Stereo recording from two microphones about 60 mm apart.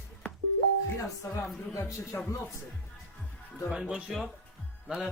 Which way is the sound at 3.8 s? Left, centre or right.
Centre.